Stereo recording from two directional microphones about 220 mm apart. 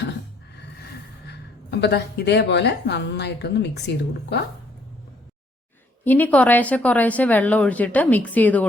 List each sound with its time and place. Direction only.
1.3 s a woman's voice: 50° left (ahead or behind)
6.1 s a woman's voice: 5° left (ahead or behind)